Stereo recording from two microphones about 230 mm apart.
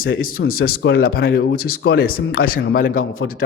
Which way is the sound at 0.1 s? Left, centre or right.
Left.